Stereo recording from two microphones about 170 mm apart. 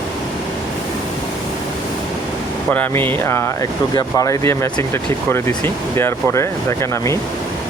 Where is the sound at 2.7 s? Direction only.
10° left (ahead or behind).